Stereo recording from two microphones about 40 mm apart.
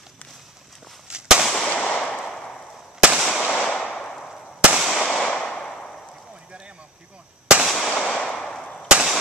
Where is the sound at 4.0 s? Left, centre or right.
Centre.